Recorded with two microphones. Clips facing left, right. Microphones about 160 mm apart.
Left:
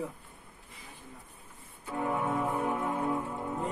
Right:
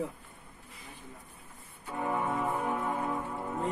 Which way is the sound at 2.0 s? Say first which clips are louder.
Left 1 dB; centre (ahead or behind).